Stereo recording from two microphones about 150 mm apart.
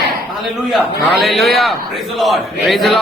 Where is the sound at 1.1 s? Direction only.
Centre (ahead or behind).